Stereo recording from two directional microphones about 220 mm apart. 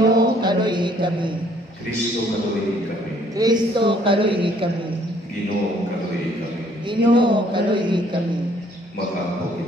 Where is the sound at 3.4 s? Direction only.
20° right (ahead or behind).